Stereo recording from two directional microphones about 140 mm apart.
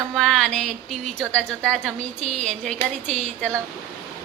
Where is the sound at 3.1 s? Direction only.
55° right (ahead or behind).